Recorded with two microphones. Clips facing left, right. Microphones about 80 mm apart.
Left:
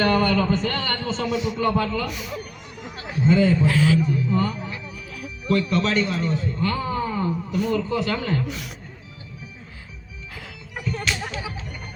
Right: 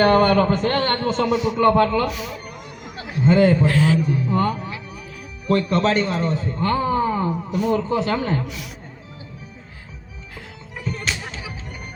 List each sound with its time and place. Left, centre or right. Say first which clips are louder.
0.0 s a man's voice: right 5 dB; right
2.9 s a sound: right 2 dB; right
3.3 s a man's voice: right 3 dB; right
8.4 s speech: left 1 dB; left